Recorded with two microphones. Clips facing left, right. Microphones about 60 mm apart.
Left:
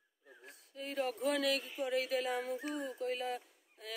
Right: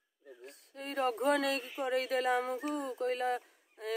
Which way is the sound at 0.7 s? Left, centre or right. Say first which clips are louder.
Right 4 dB; right.